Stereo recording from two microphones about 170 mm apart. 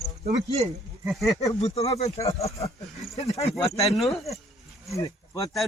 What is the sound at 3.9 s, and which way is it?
Speech, centre (ahead or behind).